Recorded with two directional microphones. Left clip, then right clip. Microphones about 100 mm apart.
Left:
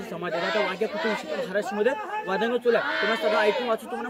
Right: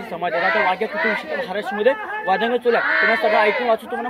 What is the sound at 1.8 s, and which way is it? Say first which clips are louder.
Speech: right 10 dB; 65° left (ahead or behind).